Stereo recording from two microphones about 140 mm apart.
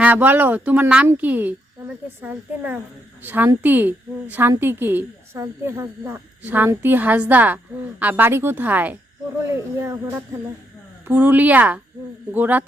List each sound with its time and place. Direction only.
0.0 s a woman's voice: 15° right (ahead or behind)
3.2 s a woman's voice: 15° right (ahead or behind)